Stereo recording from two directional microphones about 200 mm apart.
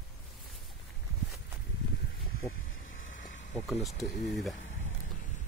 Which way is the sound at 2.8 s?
40° left (ahead or behind).